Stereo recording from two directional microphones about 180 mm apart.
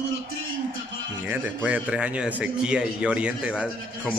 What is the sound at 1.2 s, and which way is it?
A man's voice, 10° right (ahead or behind).